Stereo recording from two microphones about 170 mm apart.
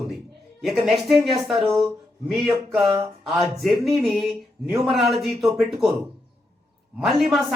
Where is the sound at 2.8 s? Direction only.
25° right (ahead or behind).